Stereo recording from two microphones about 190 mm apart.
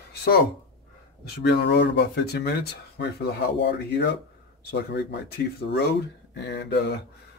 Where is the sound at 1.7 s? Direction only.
60° left (ahead or behind).